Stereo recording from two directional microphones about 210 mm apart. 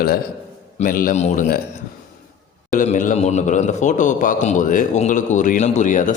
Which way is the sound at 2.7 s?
35° left (ahead or behind).